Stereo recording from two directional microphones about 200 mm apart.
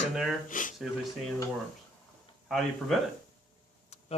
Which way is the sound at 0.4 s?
40° left (ahead or behind).